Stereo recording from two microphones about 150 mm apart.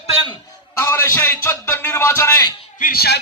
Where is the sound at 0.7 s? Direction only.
15° left (ahead or behind).